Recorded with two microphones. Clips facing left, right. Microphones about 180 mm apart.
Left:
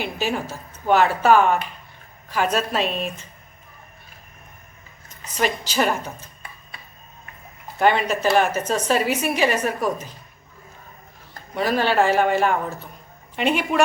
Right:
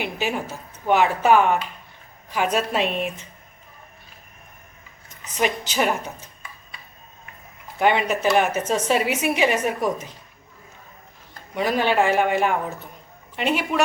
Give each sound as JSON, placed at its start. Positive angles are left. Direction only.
{"t": 0.0, "sound": "a woman's voice", "side_deg": -15}
{"t": 5.3, "sound": "a woman's voice", "side_deg": -20}
{"t": 7.8, "sound": "a woman's voice", "side_deg": -15}
{"t": 11.5, "sound": "a woman's voice", "side_deg": -15}